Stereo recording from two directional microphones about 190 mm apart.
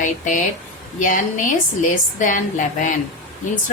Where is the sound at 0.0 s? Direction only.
40° left (ahead or behind).